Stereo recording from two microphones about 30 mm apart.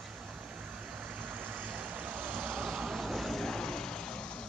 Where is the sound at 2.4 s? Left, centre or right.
Right.